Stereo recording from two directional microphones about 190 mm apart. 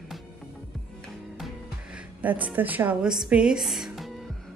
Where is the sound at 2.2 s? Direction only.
10° right (ahead or behind).